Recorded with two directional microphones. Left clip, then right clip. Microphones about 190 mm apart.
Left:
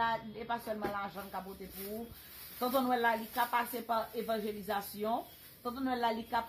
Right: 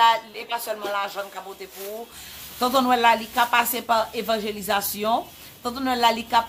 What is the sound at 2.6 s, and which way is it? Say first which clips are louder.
A woman's voice: right 12 dB; 15° right (ahead or behind).